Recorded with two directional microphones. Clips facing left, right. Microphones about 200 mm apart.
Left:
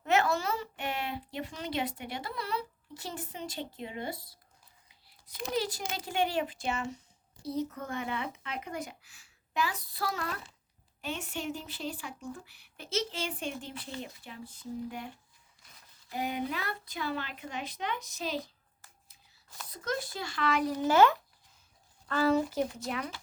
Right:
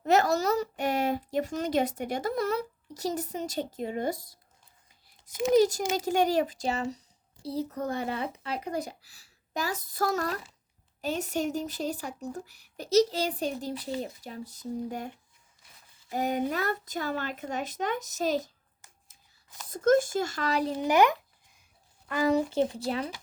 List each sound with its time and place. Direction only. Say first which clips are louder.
0.0 s a woman's voice: right 4 dB; 40° right (ahead or behind)
4.9 s a sound: right 1 dB; 45° right (ahead or behind)
5.5 s a woman's voice: right 10 dB; 45° right (ahead or behind)
16.1 s a woman's voice: right 6 dB; 45° right (ahead or behind)
19.7 s a woman's voice: right 13 dB; 50° right (ahead or behind)
20.7 s a child's voice: right 1 dB; 15° right (ahead or behind)